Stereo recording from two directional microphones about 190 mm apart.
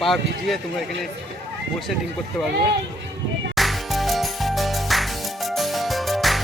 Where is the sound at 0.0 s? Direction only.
Centre (ahead or behind).